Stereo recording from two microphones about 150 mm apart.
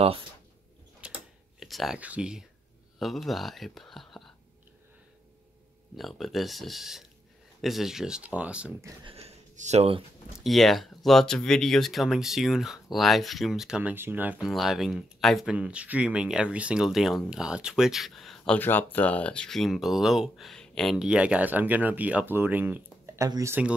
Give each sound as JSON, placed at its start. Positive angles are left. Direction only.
{"t": 1.0, "sound": "typing", "side_deg": -5}
{"t": 3.0, "sound": "speech", "side_deg": 0}
{"t": 5.9, "sound": "speech", "side_deg": 0}
{"t": 9.0, "sound": "speech", "side_deg": -40}
{"t": 10.4, "sound": "speech", "side_deg": 0}